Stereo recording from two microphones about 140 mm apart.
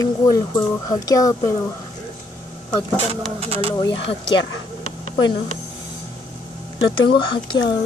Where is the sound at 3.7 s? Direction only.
30° left (ahead or behind).